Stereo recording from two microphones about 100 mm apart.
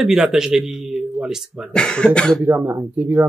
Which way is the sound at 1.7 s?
10° left (ahead or behind).